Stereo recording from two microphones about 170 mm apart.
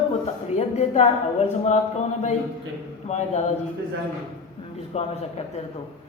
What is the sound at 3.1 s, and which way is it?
Speech, 45° left (ahead or behind).